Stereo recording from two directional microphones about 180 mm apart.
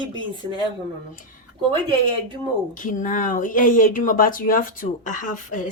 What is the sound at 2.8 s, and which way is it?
Speech, 45° left (ahead or behind).